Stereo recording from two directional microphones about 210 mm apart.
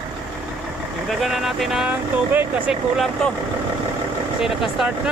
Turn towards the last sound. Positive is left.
turn(degrees=0)  # may be behind; listen again after turning